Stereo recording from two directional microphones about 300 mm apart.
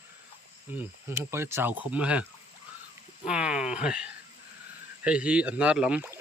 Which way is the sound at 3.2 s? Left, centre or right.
Centre.